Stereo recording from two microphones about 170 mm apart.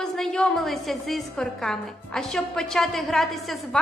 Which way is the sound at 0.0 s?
5° left (ahead or behind).